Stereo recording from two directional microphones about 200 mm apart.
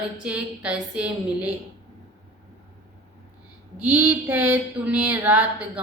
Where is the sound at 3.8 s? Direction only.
10° right (ahead or behind).